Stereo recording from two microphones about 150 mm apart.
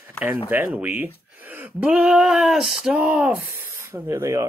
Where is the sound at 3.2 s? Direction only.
15° right (ahead or behind).